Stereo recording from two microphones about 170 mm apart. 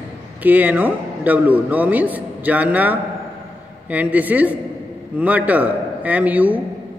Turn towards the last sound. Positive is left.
turn(degrees=-10)  # may be behind; listen again after turning